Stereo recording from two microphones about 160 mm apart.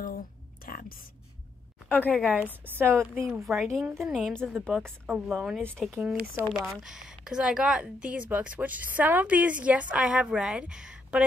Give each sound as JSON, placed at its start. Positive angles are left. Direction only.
{"t": 0.7, "sound": "a sound", "side_deg": 65}
{"t": 1.9, "sound": "a woman's voice", "side_deg": 10}
{"t": 2.2, "sound": "speech", "side_deg": -10}
{"t": 3.4, "sound": "a woman's voice", "side_deg": 0}